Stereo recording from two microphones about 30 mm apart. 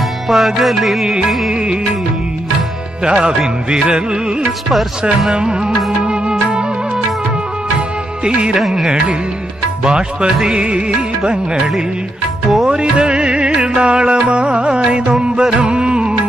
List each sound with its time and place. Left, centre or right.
0.3 s music: centre
3.1 s speech: right
5.3 s music: right
8.2 s speech: right
8.5 s music: centre
10.2 s speech: right
10.6 s music: right
11.5 s speech: centre
12.6 s music: right